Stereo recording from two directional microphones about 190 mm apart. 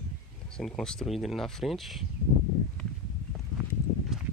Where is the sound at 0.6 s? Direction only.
Centre (ahead or behind).